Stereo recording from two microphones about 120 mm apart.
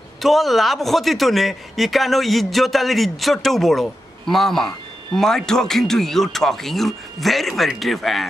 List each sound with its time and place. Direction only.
0.2 s speech: centre (ahead or behind)